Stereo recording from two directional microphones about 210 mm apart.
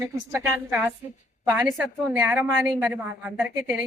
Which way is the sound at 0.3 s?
10° right (ahead or behind).